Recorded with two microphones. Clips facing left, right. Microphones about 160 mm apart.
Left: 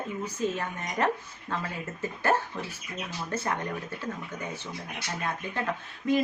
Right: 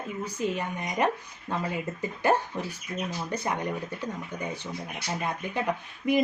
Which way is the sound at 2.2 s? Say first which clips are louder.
Right 2 dB; 15° right (ahead or behind).